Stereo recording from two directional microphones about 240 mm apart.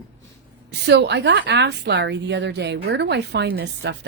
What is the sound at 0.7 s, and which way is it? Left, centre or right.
A woman's voice, right.